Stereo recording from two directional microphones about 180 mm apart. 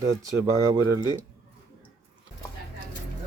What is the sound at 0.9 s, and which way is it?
Speech, 25° right (ahead or behind).